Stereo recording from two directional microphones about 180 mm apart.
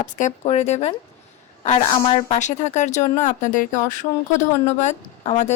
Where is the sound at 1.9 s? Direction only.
30° left (ahead or behind).